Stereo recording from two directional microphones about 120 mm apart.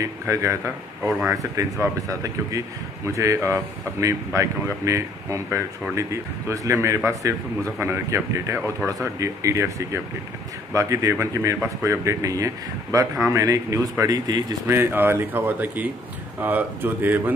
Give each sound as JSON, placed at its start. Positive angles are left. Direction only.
{"t": 0.0, "sound": "speech", "side_deg": -25}
{"t": 14.7, "sound": "speech", "side_deg": -20}